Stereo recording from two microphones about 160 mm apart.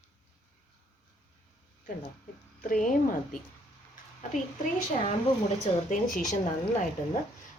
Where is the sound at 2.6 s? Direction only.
55° left (ahead or behind).